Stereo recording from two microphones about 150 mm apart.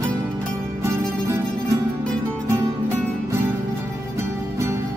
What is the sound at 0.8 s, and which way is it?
Music, 20° right (ahead or behind).